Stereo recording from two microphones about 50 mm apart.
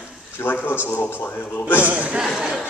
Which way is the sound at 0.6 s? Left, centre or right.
Left.